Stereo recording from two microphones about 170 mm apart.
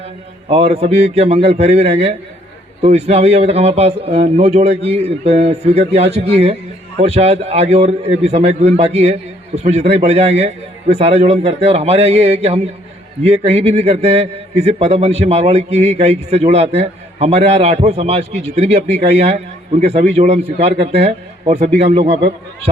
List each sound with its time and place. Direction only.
0.4 s a man's voice: 35° right (ahead or behind)